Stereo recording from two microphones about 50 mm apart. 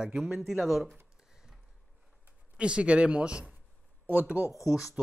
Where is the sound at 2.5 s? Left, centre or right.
Right.